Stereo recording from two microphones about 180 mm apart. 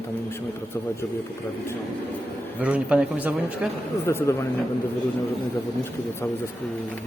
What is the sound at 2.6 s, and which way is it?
Speech, 5° right (ahead or behind).